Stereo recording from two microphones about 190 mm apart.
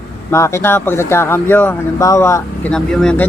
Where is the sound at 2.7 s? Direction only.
5° left (ahead or behind).